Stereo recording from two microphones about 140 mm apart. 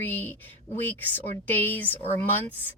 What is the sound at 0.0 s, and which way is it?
Speech, 15° left (ahead or behind).